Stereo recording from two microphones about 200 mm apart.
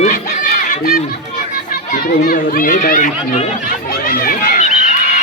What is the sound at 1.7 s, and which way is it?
Children playing, 45° left (ahead or behind).